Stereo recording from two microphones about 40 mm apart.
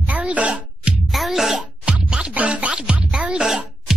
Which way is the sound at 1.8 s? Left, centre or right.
Right.